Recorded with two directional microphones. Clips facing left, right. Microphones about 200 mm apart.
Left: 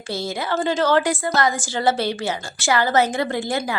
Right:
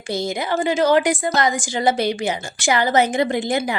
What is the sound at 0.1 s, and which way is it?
A woman's voice, 15° right (ahead or behind).